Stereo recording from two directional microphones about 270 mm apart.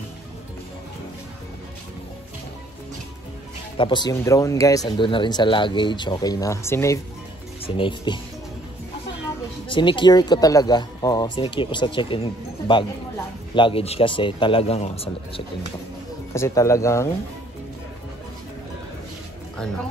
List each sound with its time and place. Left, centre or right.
3.7 s speech: centre
9.7 s speech: centre
16.3 s speech: centre